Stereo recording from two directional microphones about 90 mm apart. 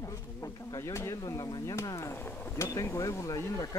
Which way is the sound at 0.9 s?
35° left (ahead or behind).